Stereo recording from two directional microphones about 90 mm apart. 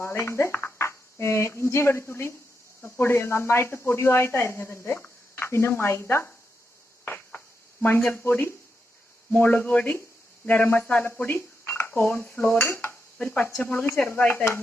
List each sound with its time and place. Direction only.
0.0 s speech: 30° left (ahead or behind)
7.0 s a sound: 20° left (ahead or behind)
9.3 s speech: 20° left (ahead or behind)
13.1 s speech: 15° left (ahead or behind)